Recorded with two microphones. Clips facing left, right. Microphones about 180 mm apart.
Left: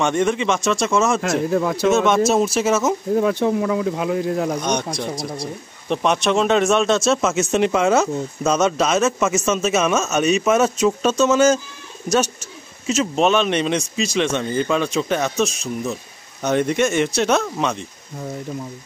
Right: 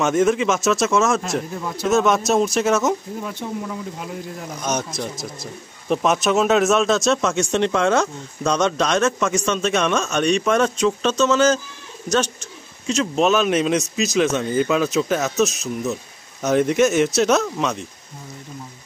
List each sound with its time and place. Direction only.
0.0 s speech: 5° right (ahead or behind)
1.5 s speech: 90° left
1.9 s speech: centre (ahead or behind)
3.2 s speech: 90° left
4.6 s speech: 5° right (ahead or behind)